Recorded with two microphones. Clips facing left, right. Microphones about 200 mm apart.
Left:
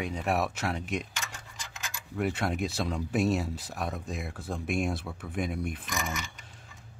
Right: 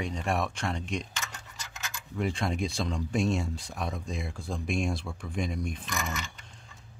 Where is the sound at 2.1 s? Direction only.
5° left (ahead or behind).